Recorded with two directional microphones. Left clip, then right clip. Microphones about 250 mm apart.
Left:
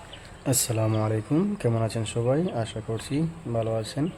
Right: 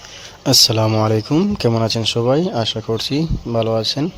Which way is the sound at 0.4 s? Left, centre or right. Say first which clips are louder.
Right 14 dB; right.